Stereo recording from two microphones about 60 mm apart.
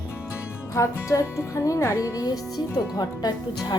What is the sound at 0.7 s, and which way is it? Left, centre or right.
Speech, left.